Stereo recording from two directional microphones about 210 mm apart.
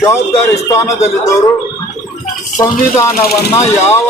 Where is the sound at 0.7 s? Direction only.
15° left (ahead or behind).